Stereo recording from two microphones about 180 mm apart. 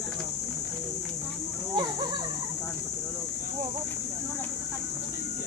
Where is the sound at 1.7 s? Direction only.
25° right (ahead or behind).